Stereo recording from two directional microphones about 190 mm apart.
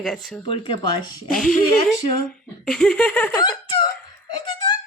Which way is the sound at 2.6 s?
5° left (ahead or behind).